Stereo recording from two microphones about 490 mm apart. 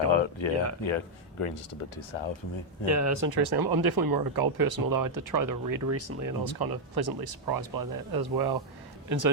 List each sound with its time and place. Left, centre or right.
0.1 s speech: left
0.9 s speech: left
2.8 s speech: right
3.2 s speech: right
6.4 s a man's voice: right